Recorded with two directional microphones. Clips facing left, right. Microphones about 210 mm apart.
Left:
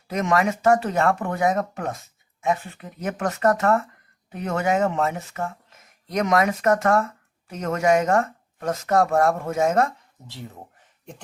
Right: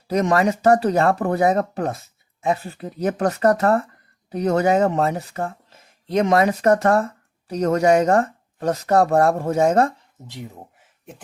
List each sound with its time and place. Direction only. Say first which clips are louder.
0.1 s speech: right 4 dB; 35° right (ahead or behind)
10.2 s speech: right 3 dB; 15° right (ahead or behind)